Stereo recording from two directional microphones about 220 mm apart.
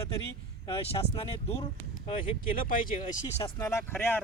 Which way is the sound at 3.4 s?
10° left (ahead or behind).